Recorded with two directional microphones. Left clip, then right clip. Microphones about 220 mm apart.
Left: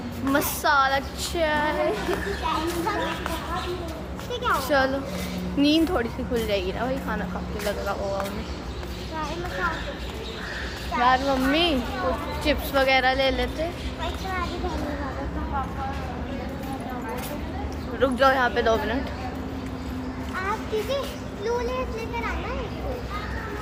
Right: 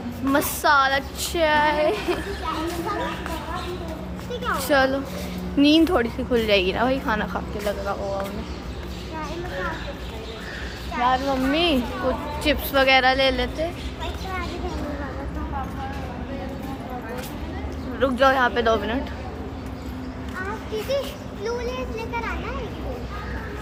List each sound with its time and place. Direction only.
0.3 s a woman's voice: 25° right (ahead or behind)
4.4 s a woman's voice: 30° right (ahead or behind)
11.0 s a child's voice: 15° right (ahead or behind)
12.4 s a woman's voice: 30° right (ahead or behind)
18.0 s a woman's voice: 15° right (ahead or behind)